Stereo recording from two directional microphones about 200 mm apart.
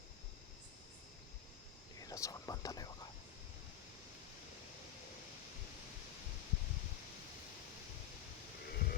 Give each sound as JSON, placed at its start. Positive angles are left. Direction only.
{"t": 2.0, "sound": "whispering", "side_deg": 15}
{"t": 8.7, "sound": "livestock", "side_deg": 50}